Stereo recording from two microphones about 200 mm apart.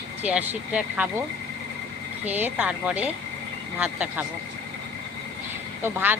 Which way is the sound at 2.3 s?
10° right (ahead or behind).